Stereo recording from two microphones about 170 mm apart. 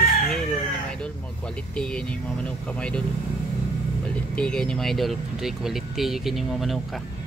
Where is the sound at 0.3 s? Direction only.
5° left (ahead or behind).